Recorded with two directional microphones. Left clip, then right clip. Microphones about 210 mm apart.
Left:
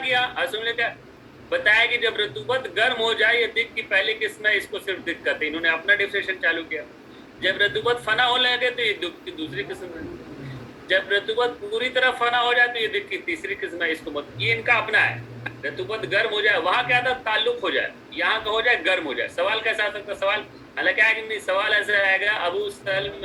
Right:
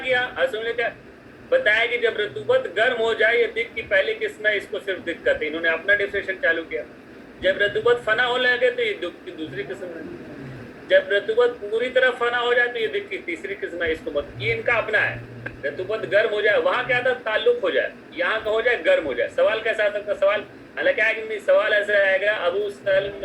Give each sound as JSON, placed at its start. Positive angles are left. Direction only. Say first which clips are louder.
{"t": 0.0, "sound": "a man's voice", "louder": "right 1 dB", "side_deg": 10}
{"t": 10.8, "sound": "speech", "louder": "right 3 dB", "side_deg": 10}
{"t": 13.1, "sound": "speech", "louder": "left 1 dB", "side_deg": -45}
{"t": 13.6, "sound": "speech", "louder": "right 1 dB", "side_deg": 15}